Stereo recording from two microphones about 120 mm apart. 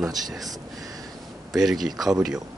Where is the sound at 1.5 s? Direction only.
Centre (ahead or behind).